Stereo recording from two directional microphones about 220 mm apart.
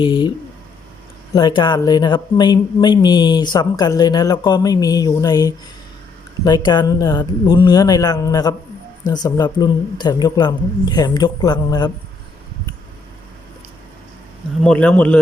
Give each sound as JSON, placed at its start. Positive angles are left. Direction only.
{"t": 0.0, "sound": "speech", "side_deg": 20}
{"t": 14.6, "sound": "speech", "side_deg": 5}